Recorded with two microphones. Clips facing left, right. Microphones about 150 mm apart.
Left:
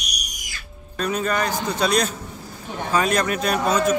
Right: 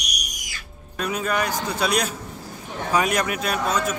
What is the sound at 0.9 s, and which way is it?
A man's voice, 10° right (ahead or behind).